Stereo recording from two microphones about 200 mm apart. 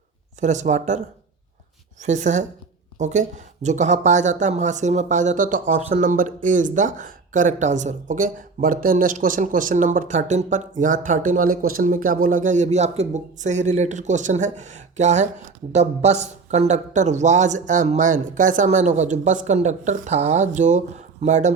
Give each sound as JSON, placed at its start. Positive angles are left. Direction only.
{"t": 0.3, "sound": "speech", "side_deg": -35}